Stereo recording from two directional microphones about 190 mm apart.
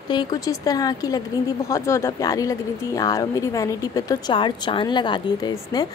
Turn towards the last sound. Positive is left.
turn(degrees=25)  # may be behind; listen again after turning